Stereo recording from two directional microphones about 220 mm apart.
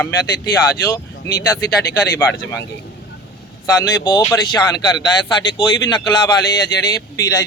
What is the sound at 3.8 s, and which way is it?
A man's voice, 15° left (ahead or behind).